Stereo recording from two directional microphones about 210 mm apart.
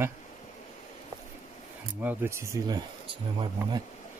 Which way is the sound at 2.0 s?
10° right (ahead or behind).